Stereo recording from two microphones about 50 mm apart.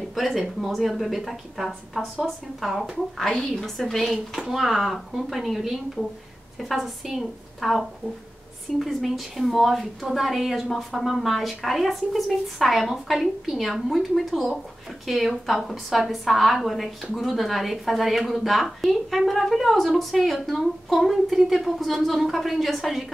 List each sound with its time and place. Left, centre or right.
0.1 s a woman's voice: centre
3.2 s a woman's voice: centre